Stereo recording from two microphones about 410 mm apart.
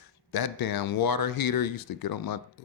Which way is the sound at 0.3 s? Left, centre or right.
Left.